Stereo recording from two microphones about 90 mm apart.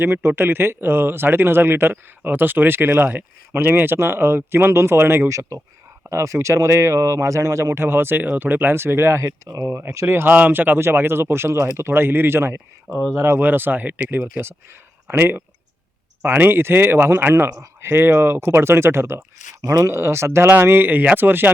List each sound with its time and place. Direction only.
0.0 s speech: 30° right (ahead or behind)